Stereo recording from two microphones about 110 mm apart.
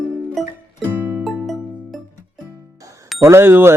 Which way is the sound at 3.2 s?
25° right (ahead or behind).